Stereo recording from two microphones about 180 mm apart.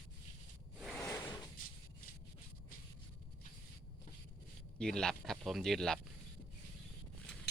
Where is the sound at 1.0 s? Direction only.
15° left (ahead or behind).